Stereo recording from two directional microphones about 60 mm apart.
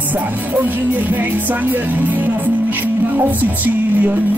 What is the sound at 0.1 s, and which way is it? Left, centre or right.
Music, right.